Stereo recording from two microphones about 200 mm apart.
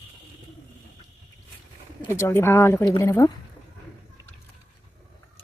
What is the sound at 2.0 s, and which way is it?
Speech, 15° left (ahead or behind).